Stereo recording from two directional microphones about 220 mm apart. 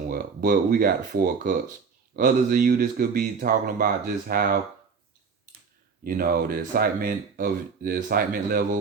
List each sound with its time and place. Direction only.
0.1 s speech: 40° right (ahead or behind)
6.1 s speech: 40° right (ahead or behind)